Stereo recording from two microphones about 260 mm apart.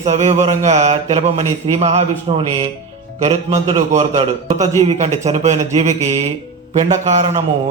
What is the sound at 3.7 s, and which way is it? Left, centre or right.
A man's voice, right.